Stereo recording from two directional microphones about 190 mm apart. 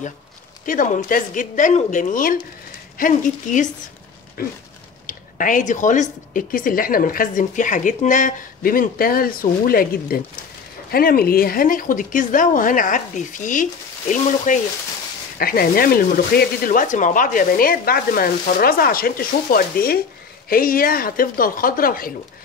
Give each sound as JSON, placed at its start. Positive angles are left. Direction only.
{"t": 0.7, "sound": "a woman's voice", "side_deg": 45}
{"t": 5.0, "sound": "a woman's voice", "side_deg": 45}